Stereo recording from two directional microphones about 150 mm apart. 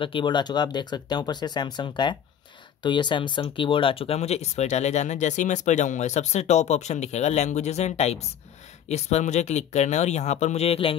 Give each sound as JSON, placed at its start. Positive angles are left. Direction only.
{"t": 0.0, "sound": "speech", "side_deg": 35}